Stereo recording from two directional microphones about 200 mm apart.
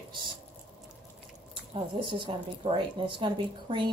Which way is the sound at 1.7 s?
25° right (ahead or behind).